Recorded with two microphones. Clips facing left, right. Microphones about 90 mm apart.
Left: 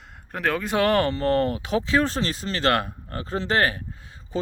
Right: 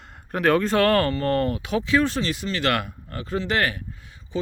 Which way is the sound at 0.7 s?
20° left (ahead or behind).